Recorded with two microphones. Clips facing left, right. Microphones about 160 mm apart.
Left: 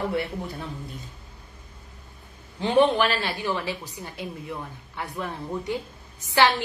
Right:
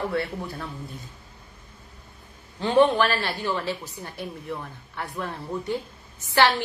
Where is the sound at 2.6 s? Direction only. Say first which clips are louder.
Right 1 dB; 20° left (ahead or behind).